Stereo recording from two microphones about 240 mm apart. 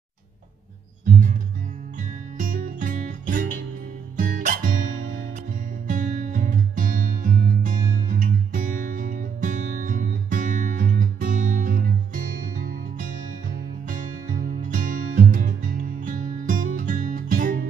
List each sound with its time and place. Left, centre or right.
2.3 s music: right
14.6 s music: right